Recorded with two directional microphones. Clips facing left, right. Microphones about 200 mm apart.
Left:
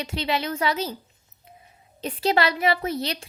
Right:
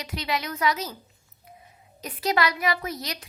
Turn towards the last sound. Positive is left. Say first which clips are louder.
# left 6 dB
turn(degrees=30)  # may be behind; listen again after turning